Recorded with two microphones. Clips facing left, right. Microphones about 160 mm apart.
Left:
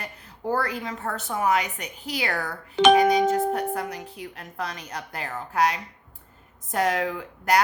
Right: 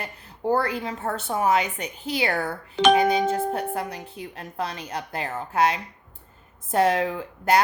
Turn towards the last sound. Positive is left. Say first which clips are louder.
# right 2 dB
turn(degrees=-30)  # may be behind; listen again after turning